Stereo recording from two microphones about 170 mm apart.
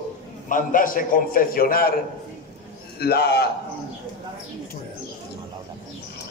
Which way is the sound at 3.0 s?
70° left (ahead or behind).